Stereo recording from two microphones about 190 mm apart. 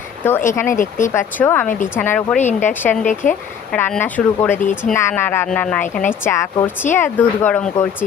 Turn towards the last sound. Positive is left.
turn(degrees=5)  # may be behind; listen again after turning